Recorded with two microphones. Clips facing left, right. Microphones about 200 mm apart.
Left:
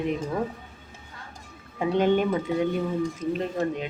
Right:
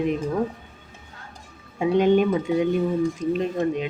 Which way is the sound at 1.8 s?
15° right (ahead or behind).